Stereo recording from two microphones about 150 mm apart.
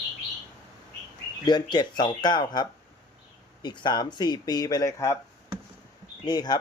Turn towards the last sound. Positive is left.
turn(degrees=25)  # may be behind; listen again after turning